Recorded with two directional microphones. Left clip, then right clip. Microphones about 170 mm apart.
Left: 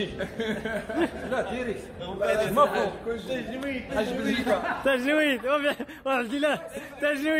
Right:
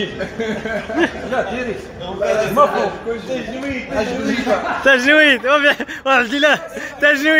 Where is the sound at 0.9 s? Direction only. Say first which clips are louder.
Right 10 dB; 5° left (ahead or behind).